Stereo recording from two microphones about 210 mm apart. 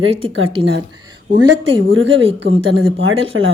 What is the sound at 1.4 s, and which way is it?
A woman's voice, 60° right (ahead or behind).